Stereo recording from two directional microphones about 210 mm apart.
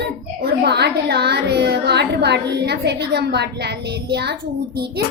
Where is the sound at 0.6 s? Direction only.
50° right (ahead or behind).